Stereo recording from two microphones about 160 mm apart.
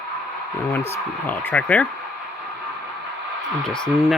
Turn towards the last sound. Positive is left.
turn(degrees=0)  # may be behind; listen again after turning